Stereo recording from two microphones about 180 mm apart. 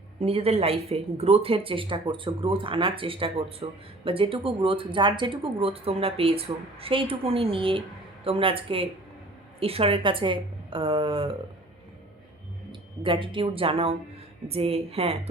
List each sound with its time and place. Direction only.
0.2 s a woman's voice: 35° right (ahead or behind)
13.0 s a woman's voice: 30° right (ahead or behind)